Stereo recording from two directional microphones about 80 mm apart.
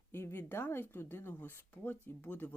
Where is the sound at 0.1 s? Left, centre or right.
Left.